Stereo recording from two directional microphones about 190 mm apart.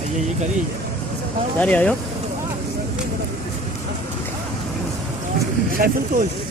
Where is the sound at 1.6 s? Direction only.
5° left (ahead or behind).